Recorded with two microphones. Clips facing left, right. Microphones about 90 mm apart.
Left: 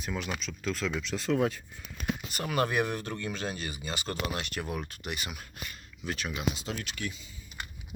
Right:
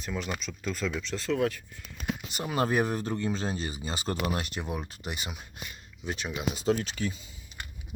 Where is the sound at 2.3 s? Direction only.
20° right (ahead or behind).